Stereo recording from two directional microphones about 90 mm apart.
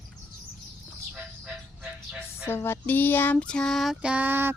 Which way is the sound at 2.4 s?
25° left (ahead or behind).